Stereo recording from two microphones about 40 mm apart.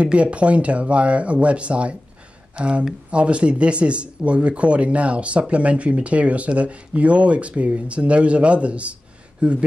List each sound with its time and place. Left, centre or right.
0.0 s speech: right